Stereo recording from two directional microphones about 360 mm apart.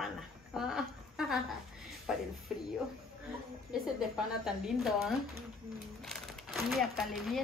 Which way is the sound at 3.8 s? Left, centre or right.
Centre.